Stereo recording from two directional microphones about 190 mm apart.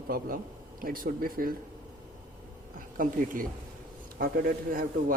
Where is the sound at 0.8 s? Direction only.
50° right (ahead or behind).